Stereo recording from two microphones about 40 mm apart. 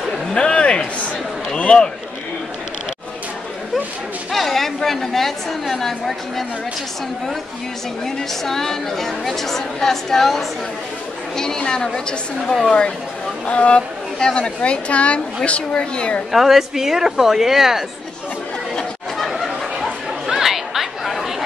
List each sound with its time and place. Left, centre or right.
0.3 s a sound: left
1.6 s speech: left
4.3 s a woman's voice: centre
8.0 s a woman's voice: centre
12.6 s speech: left
16.3 s speech: centre
19.1 s chatter: centre